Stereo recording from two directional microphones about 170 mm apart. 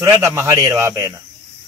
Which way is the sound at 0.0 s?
20° right (ahead or behind).